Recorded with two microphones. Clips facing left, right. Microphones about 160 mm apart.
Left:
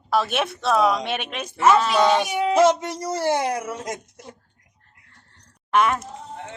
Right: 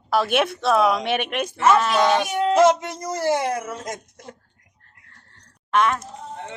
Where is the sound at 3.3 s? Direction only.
15° left (ahead or behind).